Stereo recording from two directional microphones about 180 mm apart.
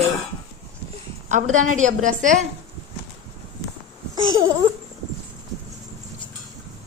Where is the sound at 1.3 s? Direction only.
45° right (ahead or behind).